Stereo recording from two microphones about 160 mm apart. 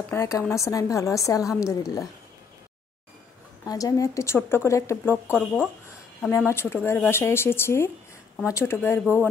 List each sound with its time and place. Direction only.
0.1 s a woman's voice: 15° left (ahead or behind)
3.6 s a woman's voice: 20° left (ahead or behind)